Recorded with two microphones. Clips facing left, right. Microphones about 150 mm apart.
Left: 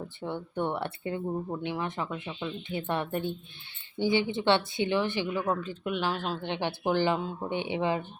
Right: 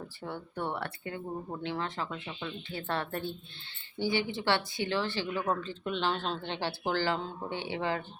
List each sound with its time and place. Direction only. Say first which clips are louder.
0.2 s speech: left 5 dB; 20° left (ahead or behind)